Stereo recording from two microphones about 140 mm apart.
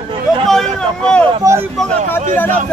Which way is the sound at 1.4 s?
25° right (ahead or behind).